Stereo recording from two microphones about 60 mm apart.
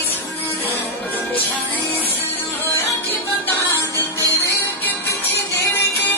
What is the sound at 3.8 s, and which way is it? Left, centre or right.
Music, left.